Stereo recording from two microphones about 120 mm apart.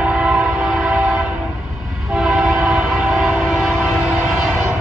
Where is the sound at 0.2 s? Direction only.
10° right (ahead or behind).